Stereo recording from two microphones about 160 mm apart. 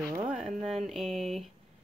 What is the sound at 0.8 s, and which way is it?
Speech, centre (ahead or behind).